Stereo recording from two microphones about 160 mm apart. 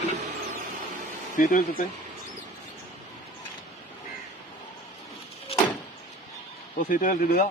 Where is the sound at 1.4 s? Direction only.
55° left (ahead or behind).